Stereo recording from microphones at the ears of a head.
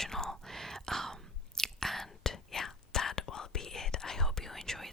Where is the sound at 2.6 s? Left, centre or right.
Left.